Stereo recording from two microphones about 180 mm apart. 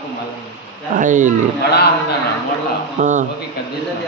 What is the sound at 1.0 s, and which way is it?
Speech, 45° right (ahead or behind).